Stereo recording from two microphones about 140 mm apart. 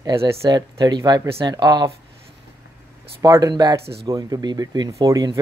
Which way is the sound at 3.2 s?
25° right (ahead or behind).